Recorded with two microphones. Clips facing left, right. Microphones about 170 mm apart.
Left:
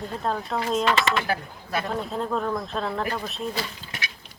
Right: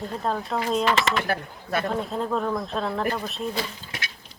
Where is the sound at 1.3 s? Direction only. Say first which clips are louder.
Right 1 dB; 50° right (ahead or behind).